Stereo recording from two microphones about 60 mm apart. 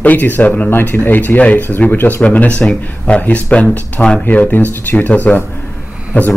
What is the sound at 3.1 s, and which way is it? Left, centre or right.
Speech, left.